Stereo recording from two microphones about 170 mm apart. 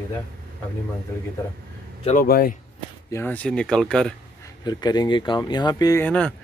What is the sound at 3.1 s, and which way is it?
Speech, 10° left (ahead or behind).